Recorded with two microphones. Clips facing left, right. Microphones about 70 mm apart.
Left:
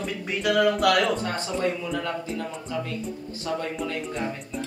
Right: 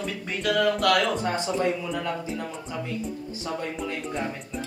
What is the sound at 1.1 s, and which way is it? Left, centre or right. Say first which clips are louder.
A man's voice: right 2 dB; centre.